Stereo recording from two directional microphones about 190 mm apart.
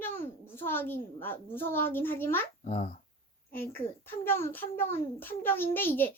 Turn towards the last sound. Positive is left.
turn(degrees=10)  # may be behind; listen again after turning